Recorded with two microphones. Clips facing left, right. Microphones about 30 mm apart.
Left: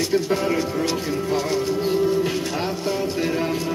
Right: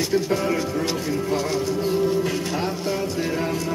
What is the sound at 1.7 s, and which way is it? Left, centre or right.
Music, left.